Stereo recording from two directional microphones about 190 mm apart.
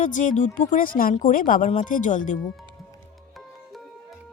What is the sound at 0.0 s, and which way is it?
Speech, 40° left (ahead or behind).